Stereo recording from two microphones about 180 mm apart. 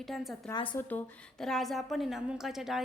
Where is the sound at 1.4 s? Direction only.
Centre (ahead or behind).